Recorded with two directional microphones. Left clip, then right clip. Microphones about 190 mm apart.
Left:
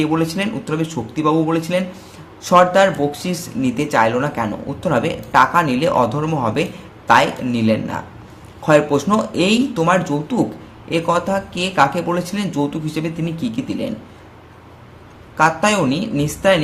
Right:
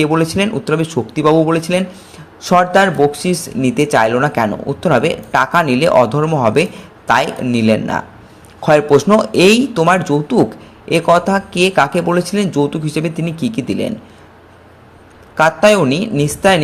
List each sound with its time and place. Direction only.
0.0 s speech: 30° right (ahead or behind)
15.4 s speech: 30° right (ahead or behind)